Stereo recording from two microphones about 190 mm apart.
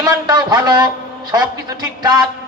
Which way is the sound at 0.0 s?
20° right (ahead or behind).